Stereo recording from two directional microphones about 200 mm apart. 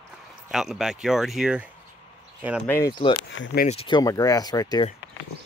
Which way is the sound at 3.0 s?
30° left (ahead or behind).